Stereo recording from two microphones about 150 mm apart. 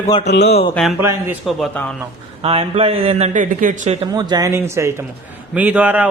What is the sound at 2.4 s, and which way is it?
A man's voice, 40° right (ahead or behind).